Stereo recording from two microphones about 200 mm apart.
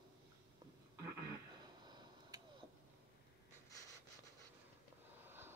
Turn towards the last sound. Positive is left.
turn(degrees=-10)  # may be behind; listen again after turning